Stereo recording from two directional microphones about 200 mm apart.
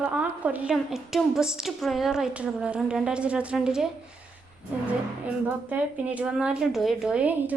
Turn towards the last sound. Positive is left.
turn(degrees=-5)  # may be behind; listen again after turning